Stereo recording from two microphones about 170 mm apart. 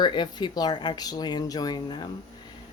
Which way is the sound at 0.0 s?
25° left (ahead or behind).